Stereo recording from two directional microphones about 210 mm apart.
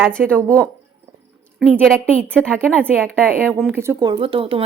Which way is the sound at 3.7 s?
15° right (ahead or behind).